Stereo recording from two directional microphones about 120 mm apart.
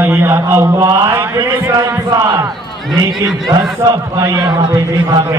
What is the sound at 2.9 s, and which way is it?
Speech, centre (ahead or behind).